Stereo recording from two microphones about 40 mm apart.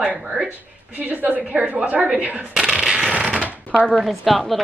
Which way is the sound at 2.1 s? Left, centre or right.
Right.